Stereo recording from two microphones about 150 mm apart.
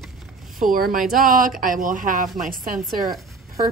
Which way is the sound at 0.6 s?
65° right (ahead or behind).